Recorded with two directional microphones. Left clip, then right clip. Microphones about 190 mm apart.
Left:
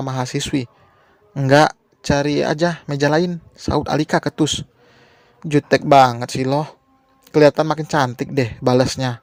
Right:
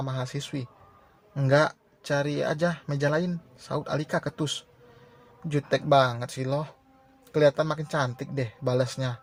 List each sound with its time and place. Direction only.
0.0 s speech: 45° left (ahead or behind)